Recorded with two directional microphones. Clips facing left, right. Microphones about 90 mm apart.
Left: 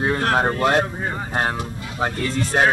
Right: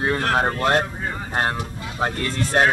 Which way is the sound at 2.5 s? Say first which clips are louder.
Even; centre (ahead or behind).